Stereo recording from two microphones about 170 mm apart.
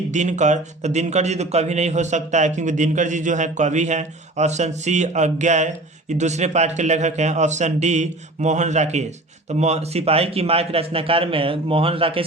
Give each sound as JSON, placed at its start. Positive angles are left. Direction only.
{"t": 0.1, "sound": "a man's voice", "side_deg": -45}